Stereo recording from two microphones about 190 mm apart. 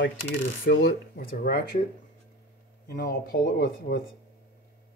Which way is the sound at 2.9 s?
55° left (ahead or behind).